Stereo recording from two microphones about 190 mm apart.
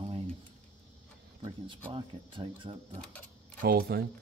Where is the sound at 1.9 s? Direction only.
25° right (ahead or behind).